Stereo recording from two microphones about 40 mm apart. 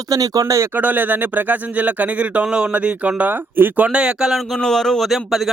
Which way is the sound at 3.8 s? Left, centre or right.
Right.